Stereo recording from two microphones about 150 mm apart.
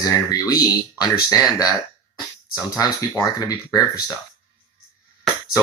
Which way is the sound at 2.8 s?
20° left (ahead or behind).